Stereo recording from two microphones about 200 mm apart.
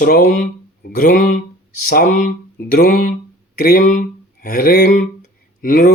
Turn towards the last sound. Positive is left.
turn(degrees=45)  # may be behind; listen again after turning